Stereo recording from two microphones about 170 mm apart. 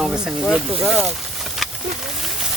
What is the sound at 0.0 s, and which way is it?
Speech, centre (ahead or behind).